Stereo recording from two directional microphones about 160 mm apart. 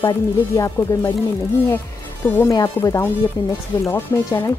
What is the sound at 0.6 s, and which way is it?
Speech, 15° left (ahead or behind).